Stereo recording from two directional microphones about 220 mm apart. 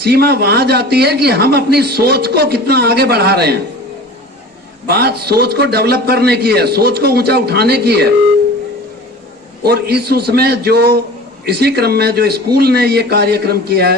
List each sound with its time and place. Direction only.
0.0 s a man's voice: 45° right (ahead or behind)
4.9 s a man's voice: 45° right (ahead or behind)
9.6 s a man's voice: 45° right (ahead or behind)